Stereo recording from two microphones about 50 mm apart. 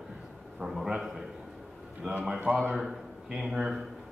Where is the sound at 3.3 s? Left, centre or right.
Centre.